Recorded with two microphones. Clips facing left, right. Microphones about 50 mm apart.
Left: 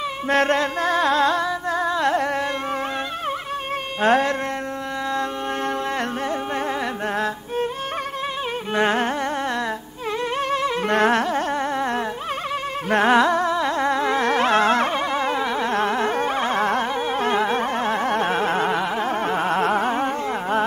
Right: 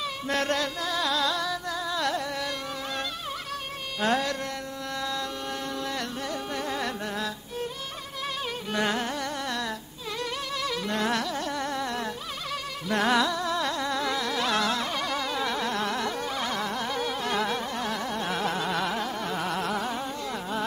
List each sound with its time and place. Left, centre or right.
0.3 s music: left
4.0 s music: left
8.7 s carnatic music: left
10.5 s music: left
10.9 s carnatic music: left
16.9 s carnatic music: left